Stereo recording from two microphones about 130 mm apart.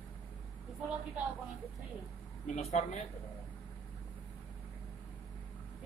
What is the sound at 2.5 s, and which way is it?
Speech, 55° left (ahead or behind).